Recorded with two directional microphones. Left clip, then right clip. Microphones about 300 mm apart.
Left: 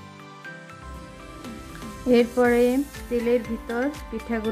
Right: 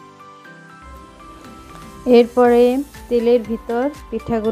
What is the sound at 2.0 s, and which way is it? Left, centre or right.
Speech, centre.